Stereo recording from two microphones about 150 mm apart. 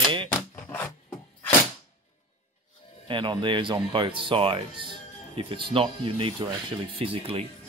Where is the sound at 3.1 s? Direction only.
35° right (ahead or behind).